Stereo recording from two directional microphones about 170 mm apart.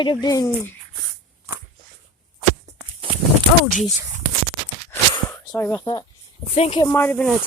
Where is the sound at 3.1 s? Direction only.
30° right (ahead or behind).